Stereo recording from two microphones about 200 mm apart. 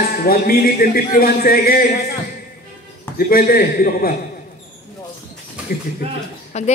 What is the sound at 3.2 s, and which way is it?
Speech, 50° left (ahead or behind).